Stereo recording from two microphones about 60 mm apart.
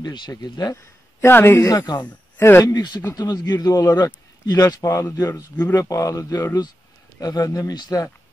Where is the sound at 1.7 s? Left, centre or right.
Left.